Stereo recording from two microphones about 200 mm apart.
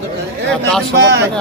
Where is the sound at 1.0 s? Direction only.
60° right (ahead or behind).